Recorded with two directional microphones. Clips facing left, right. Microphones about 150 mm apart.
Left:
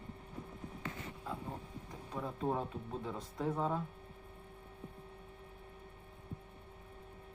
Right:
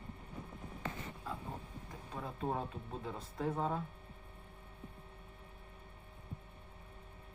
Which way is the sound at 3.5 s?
5° right (ahead or behind).